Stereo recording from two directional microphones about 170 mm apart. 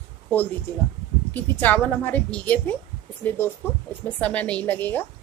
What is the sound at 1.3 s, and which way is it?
A woman's voice, 10° left (ahead or behind).